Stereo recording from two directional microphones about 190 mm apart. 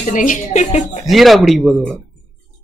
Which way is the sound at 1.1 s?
Centre (ahead or behind).